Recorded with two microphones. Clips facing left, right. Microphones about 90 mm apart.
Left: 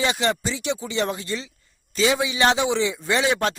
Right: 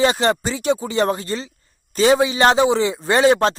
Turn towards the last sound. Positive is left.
turn(degrees=-40)  # may be behind; listen again after turning